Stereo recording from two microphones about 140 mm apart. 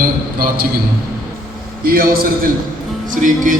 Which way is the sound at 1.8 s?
90° right.